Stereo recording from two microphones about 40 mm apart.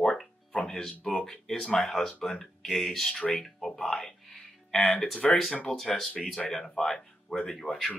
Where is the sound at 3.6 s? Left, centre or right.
Centre.